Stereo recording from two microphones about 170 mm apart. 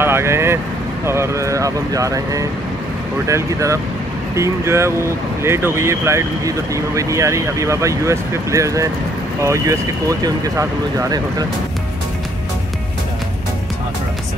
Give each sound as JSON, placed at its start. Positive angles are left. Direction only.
{"t": 0.0, "sound": "vehicle", "side_deg": -15}
{"t": 1.0, "sound": "speech", "side_deg": -15}